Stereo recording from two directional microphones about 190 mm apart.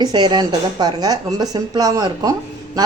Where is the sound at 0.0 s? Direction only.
25° right (ahead or behind).